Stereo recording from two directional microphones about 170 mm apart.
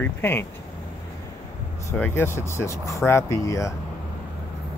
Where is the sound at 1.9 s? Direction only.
10° left (ahead or behind).